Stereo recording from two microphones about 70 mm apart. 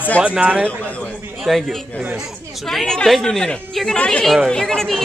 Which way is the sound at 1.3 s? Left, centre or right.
Centre.